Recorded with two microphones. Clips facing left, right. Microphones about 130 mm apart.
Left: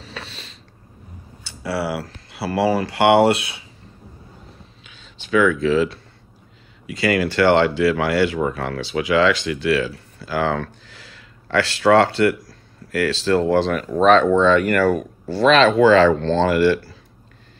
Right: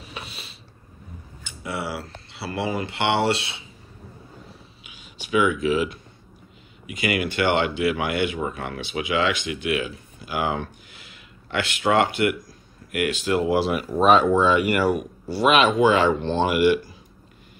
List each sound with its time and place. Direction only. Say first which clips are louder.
0.0 s a sound: left 2 dB; 10° right (ahead or behind)
1.8 s speech: left 6 dB; 25° right (ahead or behind)
5.2 s speech: left 4 dB; 15° right (ahead or behind)